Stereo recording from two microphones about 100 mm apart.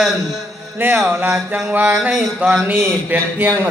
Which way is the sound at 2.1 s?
5° right (ahead or behind).